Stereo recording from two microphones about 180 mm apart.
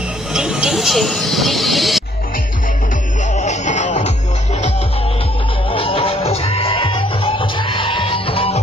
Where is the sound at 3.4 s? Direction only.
40° left (ahead or behind).